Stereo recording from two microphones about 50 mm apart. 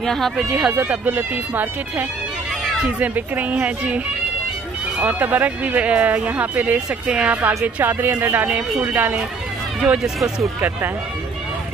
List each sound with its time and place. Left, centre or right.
0.0 s speech: centre
0.5 s speech: centre
0.7 s speech: right
5.0 s speech: right